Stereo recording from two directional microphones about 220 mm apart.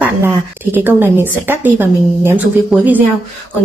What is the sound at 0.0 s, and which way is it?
A woman's voice, 10° right (ahead or behind).